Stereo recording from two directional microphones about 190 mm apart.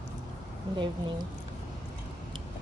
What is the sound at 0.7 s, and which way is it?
Speech, 25° right (ahead or behind).